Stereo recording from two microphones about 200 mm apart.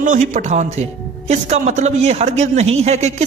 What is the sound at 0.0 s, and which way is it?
A man's voice, 40° right (ahead or behind).